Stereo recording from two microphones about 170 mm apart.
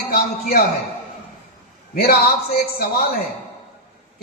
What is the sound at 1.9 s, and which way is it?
Speech, 65° left (ahead or behind).